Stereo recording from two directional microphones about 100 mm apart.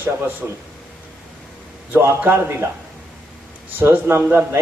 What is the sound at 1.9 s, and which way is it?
Speech, 20° right (ahead or behind).